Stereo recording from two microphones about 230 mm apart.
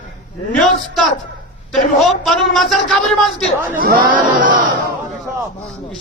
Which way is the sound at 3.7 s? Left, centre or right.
Right.